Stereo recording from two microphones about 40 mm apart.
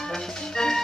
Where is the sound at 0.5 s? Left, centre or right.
Centre.